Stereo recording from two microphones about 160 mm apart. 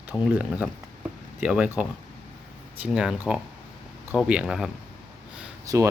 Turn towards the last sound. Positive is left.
turn(degrees=-20)  # may be behind; listen again after turning